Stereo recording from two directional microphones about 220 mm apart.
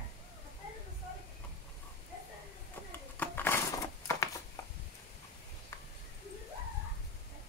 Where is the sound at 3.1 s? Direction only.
10° left (ahead or behind).